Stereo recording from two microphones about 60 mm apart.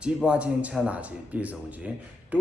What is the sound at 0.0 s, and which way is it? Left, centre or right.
Speech, centre.